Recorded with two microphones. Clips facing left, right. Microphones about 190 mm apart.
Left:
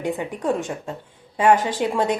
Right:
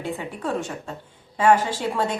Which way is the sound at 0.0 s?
20° left (ahead or behind).